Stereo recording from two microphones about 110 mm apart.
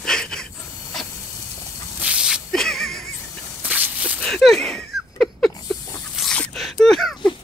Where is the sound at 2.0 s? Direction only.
10° right (ahead or behind).